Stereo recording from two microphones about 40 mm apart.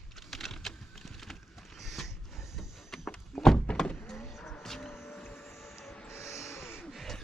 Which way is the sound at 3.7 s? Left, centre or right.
Left.